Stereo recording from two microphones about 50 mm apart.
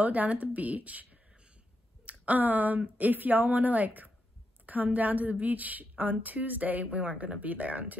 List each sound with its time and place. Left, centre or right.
0.0 s a woman's voice: right